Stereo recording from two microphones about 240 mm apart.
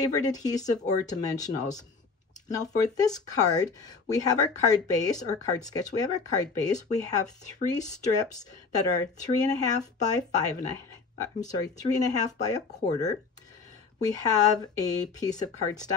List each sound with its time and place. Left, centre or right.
0.0 s speech: centre
2.5 s speech: centre
14.0 s speech: centre